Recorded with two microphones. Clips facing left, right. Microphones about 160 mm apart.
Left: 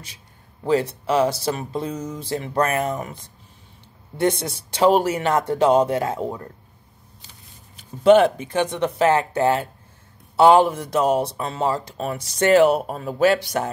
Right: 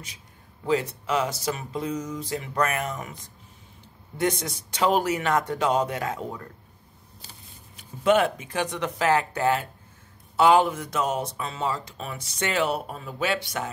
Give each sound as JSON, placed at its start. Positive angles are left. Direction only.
{"t": 0.7, "sound": "speech", "side_deg": 30}
{"t": 4.2, "sound": "speech", "side_deg": 30}
{"t": 8.0, "sound": "speech", "side_deg": 30}